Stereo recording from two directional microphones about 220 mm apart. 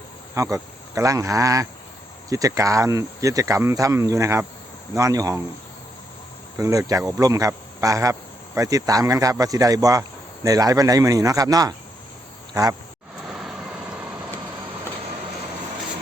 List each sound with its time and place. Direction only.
0.3 s speech: 15° right (ahead or behind)
6.6 s speech: 15° right (ahead or behind)
13.2 s vehicle: centre (ahead or behind)